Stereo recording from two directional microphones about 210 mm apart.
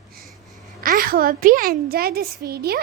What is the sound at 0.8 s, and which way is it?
A child's voice, 45° right (ahead or behind).